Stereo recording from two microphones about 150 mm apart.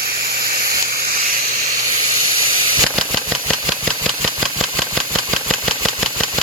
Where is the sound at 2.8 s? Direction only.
Centre (ahead or behind).